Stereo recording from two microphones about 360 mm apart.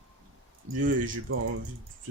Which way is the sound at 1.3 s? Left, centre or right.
Right.